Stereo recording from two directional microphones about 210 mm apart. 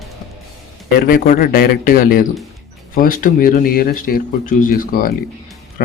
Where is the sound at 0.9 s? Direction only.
45° left (ahead or behind).